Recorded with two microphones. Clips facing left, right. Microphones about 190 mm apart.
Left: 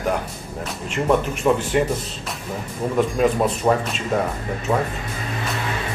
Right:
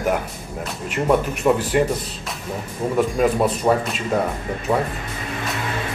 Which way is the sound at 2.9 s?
5° right (ahead or behind).